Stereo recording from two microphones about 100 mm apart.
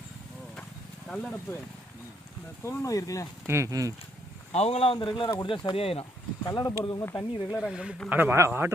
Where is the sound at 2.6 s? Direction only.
25° left (ahead or behind).